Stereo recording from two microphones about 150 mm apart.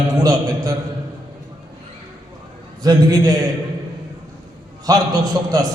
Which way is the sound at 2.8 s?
25° right (ahead or behind).